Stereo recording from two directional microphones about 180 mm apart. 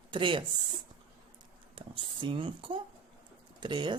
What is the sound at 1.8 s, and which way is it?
A woman's voice, 30° right (ahead or behind).